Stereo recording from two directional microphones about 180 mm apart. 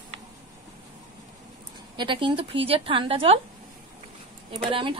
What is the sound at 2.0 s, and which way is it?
Speech, 25° right (ahead or behind).